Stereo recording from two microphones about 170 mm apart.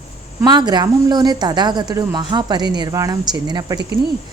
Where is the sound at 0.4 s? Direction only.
25° right (ahead or behind).